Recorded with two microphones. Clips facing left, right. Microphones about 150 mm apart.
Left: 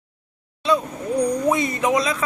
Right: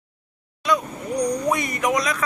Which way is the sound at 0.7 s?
30° left (ahead or behind).